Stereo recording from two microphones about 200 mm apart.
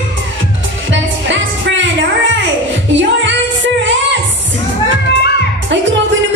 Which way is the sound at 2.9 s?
65° right (ahead or behind).